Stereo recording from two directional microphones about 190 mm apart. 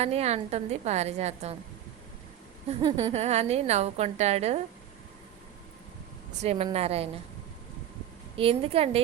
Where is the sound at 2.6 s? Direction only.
25° right (ahead or behind).